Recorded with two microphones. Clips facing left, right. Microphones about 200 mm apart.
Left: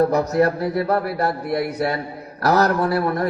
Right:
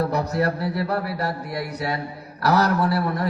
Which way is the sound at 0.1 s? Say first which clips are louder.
Left 5 dB; 50° left (ahead or behind).